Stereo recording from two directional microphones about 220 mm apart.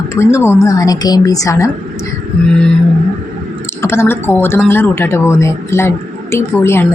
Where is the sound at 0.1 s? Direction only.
15° left (ahead or behind).